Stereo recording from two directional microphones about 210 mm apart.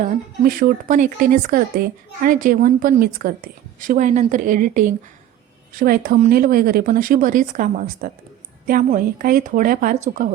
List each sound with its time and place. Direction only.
0.0 s speech: 40° right (ahead or behind)